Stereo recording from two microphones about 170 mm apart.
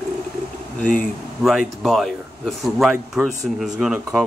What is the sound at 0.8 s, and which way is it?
Speech, 5° left (ahead or behind).